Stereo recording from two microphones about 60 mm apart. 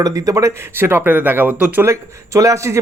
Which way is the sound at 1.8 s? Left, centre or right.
Right.